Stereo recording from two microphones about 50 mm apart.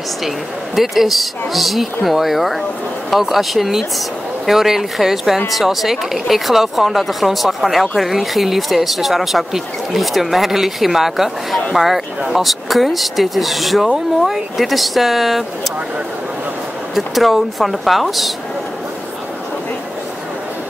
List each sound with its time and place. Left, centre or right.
0.7 s speech: centre
16.9 s speech: centre